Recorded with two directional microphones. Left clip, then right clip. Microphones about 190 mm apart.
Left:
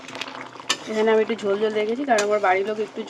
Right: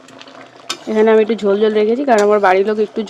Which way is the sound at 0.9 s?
45° right (ahead or behind).